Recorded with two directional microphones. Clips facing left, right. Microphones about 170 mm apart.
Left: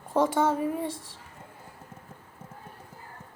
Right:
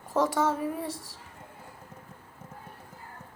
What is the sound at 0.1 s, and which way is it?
Speech, 25° left (ahead or behind).